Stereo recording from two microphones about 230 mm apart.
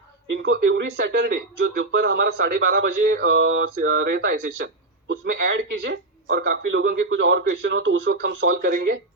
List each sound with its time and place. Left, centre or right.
0.4 s speech: right